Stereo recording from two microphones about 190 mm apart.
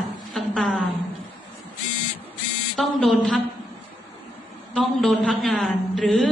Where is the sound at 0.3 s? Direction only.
Centre (ahead or behind).